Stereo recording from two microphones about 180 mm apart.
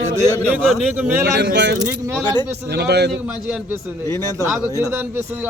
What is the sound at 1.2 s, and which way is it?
Speech, 65° right (ahead or behind).